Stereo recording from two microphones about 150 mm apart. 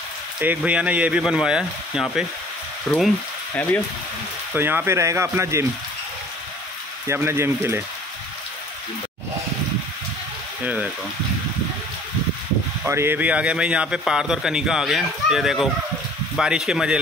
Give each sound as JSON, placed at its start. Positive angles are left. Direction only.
{"t": 0.4, "sound": "speech", "side_deg": -10}
{"t": 2.9, "sound": "frying", "side_deg": 15}
{"t": 4.6, "sound": "speech", "side_deg": -15}
{"t": 7.1, "sound": "speech", "side_deg": -15}
{"t": 10.6, "sound": "speech", "side_deg": -10}
{"t": 12.8, "sound": "a man's voice", "side_deg": -15}